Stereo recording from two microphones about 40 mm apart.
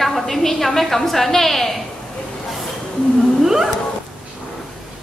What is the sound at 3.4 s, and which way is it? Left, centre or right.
Whale vocalization, centre.